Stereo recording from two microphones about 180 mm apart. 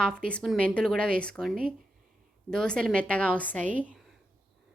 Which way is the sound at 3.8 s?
5° right (ahead or behind).